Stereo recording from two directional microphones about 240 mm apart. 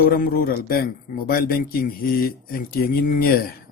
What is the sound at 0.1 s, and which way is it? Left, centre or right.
A man's voice, left.